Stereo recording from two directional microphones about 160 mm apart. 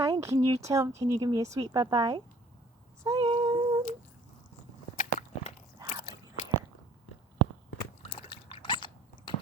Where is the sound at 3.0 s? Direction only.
25° right (ahead or behind).